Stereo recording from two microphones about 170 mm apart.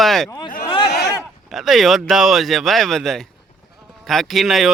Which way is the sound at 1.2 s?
Centre (ahead or behind).